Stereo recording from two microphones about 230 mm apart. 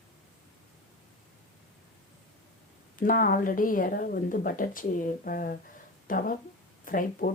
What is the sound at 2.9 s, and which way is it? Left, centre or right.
Speech, left.